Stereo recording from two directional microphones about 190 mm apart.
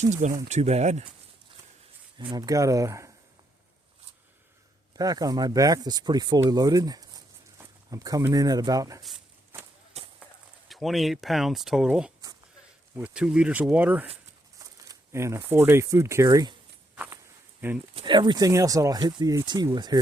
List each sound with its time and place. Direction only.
0.0 s speech: 40° right (ahead or behind)
2.1 s speech: 20° right (ahead or behind)
4.9 s speech: 20° right (ahead or behind)
10.0 s a sound: 35° right (ahead or behind)
10.7 s speech: centre (ahead or behind); by 16.6 s 20° right (ahead or behind)
16.9 s walk: 5° right (ahead or behind)
17.9 s speech: 25° right (ahead or behind)